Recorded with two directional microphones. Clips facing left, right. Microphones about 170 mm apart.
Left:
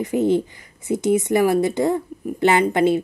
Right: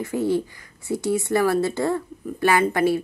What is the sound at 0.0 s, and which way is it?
Speech, 20° left (ahead or behind).